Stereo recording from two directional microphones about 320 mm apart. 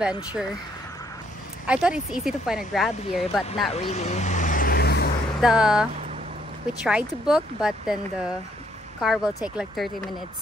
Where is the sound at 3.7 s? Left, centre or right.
Centre.